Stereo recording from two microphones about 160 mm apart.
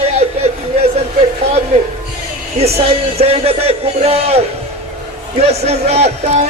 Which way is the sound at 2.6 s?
40° right (ahead or behind).